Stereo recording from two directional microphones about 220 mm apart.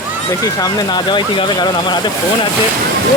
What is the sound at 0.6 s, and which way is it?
Speech, 20° left (ahead or behind).